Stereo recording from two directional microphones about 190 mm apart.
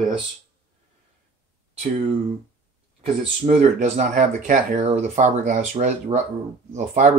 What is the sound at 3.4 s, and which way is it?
Speech, 35° right (ahead or behind).